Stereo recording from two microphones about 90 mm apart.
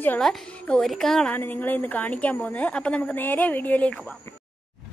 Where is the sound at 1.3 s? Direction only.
20° left (ahead or behind).